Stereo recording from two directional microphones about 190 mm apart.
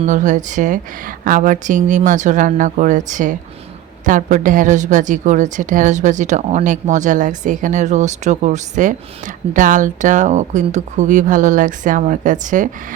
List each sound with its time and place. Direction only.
0.0 s a woman's voice: 40° right (ahead or behind)